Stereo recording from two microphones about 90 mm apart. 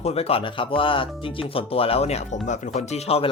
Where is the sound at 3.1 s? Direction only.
90° left.